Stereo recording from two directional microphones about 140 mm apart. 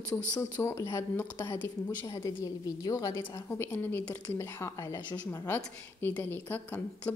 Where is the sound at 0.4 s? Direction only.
20° left (ahead or behind).